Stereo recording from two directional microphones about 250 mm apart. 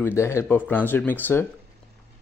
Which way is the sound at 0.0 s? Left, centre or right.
Centre.